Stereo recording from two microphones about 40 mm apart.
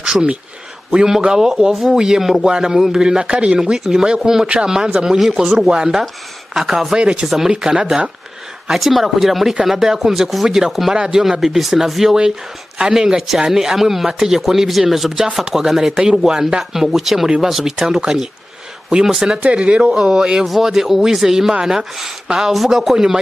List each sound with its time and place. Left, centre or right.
0.0 s speech: right
1.7 s speech: centre
6.5 s speech: centre
7.0 s speech: right
7.2 s speech: centre
7.5 s speech: right
8.7 s speech: centre
19.4 s speech: right
19.8 s speech: centre